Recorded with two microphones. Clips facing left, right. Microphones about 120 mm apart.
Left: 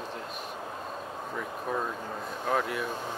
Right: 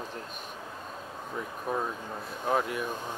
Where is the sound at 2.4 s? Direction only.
15° right (ahead or behind).